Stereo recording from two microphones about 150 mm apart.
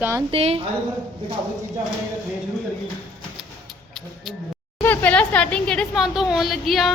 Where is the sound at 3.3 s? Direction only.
Centre (ahead or behind).